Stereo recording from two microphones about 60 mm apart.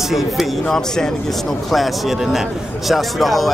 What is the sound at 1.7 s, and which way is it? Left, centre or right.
A man's voice, centre.